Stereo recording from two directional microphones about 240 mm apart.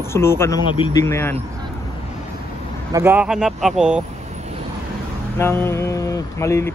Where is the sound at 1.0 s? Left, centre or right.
Centre.